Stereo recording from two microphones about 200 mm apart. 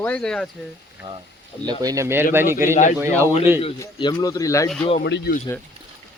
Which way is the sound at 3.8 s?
20° left (ahead or behind).